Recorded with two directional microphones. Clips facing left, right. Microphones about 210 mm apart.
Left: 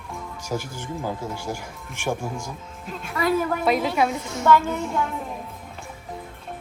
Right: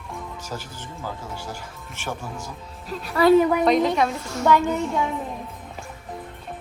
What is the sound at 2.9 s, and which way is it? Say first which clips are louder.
Speech: right 5 dB; 35° right (ahead or behind).